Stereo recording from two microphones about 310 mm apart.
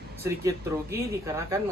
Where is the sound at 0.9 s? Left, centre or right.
Centre.